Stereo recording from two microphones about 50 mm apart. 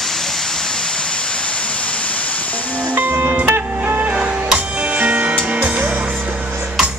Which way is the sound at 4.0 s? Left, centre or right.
Right.